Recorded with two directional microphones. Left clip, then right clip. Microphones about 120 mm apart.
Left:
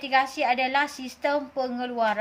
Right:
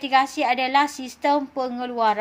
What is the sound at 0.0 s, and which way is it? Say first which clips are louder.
A woman's voice: right 3 dB; 35° right (ahead or behind).